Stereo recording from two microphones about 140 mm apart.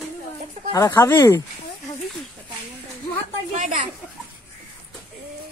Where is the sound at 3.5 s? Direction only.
60° right (ahead or behind).